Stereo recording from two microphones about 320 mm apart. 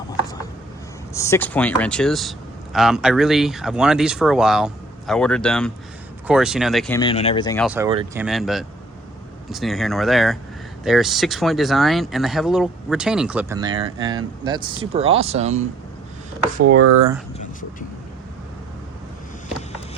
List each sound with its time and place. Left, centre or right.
1.1 s speech: centre
7.0 s speech: centre
7.6 s speech: centre
7.9 s speech: centre
8.2 s speech: centre; by 15.6 s right
16.6 s speech: right
17.3 s speech: left